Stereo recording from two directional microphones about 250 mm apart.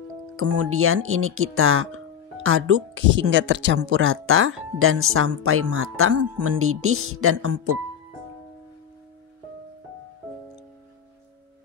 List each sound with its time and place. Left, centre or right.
0.4 s speech: right